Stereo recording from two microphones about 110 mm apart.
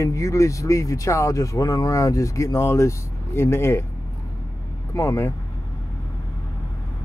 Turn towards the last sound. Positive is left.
turn(degrees=25)  # may be behind; listen again after turning